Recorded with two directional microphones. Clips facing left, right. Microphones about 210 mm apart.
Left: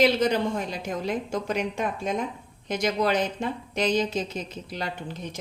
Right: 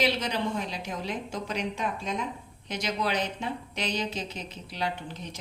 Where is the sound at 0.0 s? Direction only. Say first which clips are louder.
Left 6 dB; 50° left (ahead or behind).